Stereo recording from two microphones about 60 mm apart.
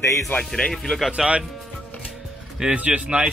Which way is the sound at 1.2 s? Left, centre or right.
Centre.